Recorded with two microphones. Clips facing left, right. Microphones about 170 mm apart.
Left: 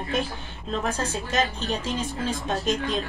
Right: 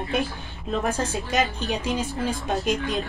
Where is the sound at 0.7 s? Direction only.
15° right (ahead or behind).